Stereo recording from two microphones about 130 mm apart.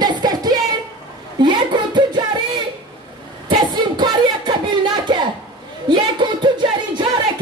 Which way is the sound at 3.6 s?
30° right (ahead or behind).